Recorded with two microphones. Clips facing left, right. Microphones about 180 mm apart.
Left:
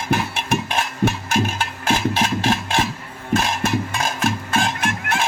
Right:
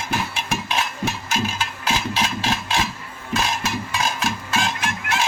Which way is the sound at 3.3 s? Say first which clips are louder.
Left 4 dB; 50° left (ahead or behind).